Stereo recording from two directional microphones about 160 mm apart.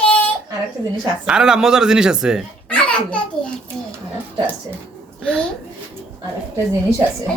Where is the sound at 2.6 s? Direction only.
5° left (ahead or behind).